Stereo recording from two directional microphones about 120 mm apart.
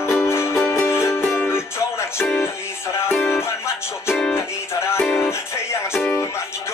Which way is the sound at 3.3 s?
20° left (ahead or behind).